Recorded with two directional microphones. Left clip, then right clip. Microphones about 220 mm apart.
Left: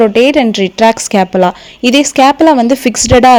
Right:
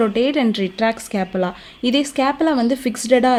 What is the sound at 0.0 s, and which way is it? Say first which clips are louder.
A woman's voice: left 10 dB; 30° left (ahead or behind).